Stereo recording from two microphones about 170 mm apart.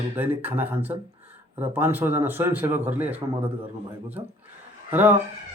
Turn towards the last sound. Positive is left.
turn(degrees=-10)  # may be behind; listen again after turning